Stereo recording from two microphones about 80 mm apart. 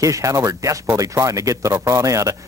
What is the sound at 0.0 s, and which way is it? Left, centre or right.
Speech, right.